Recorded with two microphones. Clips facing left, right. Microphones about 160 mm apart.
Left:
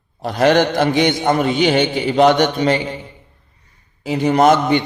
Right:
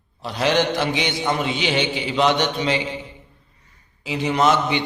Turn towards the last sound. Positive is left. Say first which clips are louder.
# left 6 dB
turn(degrees=50)  # may be behind; listen again after turning